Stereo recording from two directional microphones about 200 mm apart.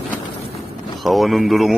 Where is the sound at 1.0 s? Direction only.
Centre (ahead or behind).